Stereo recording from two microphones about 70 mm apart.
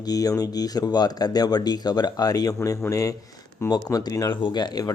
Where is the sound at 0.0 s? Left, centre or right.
Left.